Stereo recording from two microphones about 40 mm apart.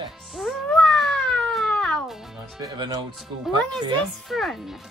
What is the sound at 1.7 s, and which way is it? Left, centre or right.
Music, left.